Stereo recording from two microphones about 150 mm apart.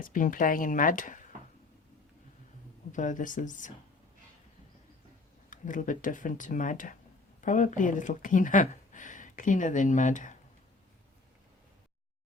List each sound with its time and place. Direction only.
0.0 s speech: 65° left (ahead or behind)
2.9 s speech: 55° left (ahead or behind)
5.5 s speech: 60° left (ahead or behind)